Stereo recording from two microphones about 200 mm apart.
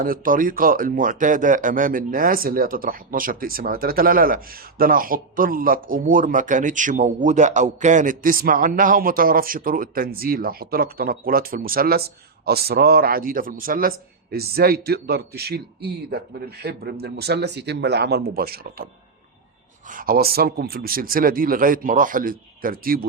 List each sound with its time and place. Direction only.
0.0 s speech: 45° right (ahead or behind)
19.9 s speech: 45° right (ahead or behind)